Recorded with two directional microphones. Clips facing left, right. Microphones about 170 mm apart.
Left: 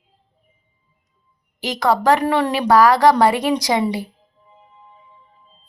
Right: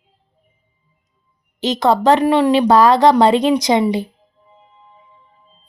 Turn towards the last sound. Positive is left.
turn(degrees=-20)  # may be behind; listen again after turning